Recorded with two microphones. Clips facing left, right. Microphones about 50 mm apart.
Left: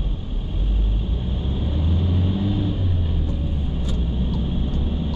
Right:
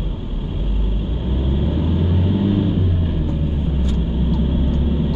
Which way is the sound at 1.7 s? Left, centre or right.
Centre.